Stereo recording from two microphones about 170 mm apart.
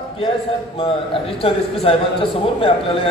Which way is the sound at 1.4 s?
35° left (ahead or behind).